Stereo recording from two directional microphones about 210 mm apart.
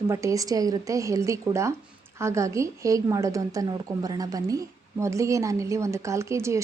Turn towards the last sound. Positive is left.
turn(degrees=-15)  # may be behind; listen again after turning